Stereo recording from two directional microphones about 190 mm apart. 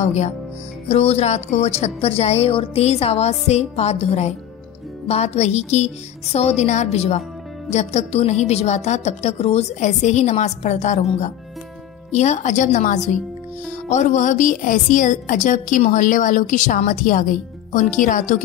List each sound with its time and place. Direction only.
0.0 s a woman's voice: 35° left (ahead or behind)